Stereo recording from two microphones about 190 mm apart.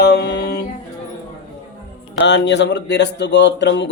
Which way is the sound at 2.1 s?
65° left (ahead or behind).